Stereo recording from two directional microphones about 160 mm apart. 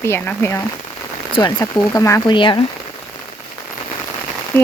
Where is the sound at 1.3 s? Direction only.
25° left (ahead or behind).